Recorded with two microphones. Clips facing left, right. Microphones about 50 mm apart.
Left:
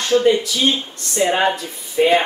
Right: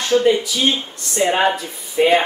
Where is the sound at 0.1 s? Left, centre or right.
Centre.